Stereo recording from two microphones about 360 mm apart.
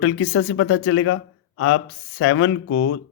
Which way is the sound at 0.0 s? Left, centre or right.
Left.